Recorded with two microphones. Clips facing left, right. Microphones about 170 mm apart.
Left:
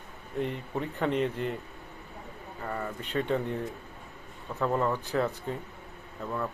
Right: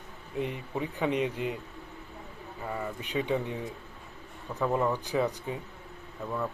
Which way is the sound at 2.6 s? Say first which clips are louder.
Even; 10° right (ahead or behind).